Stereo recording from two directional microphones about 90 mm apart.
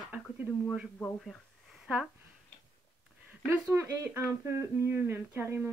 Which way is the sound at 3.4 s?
30° right (ahead or behind).